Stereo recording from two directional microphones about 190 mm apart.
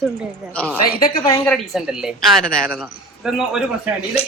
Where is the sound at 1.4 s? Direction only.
Centre (ahead or behind).